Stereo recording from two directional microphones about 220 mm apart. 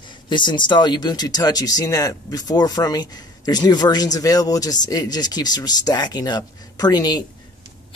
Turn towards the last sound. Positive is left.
turn(degrees=20)  # may be behind; listen again after turning